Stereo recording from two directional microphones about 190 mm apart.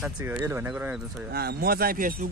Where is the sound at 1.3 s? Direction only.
55° right (ahead or behind).